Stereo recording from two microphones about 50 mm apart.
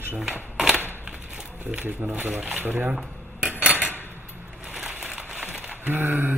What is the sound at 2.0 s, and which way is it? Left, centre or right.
Speech, right.